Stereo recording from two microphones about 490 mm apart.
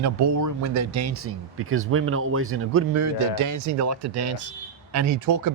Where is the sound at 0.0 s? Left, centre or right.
Right.